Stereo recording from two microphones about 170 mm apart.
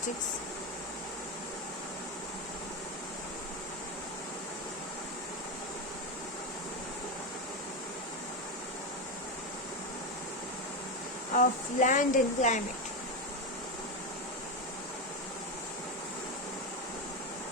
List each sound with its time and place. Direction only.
11.3 s speech: 50° left (ahead or behind)